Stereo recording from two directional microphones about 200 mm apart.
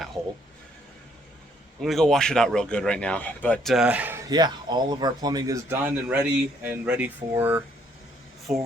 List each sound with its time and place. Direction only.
1.8 s a man's voice: centre (ahead or behind)
4.3 s a man's voice: 20° right (ahead or behind); by 8.6 s centre (ahead or behind)